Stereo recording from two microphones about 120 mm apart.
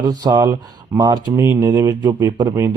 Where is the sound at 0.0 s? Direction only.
35° right (ahead or behind).